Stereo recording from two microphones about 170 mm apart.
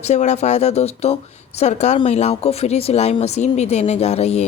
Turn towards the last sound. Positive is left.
turn(degrees=40)  # may be behind; listen again after turning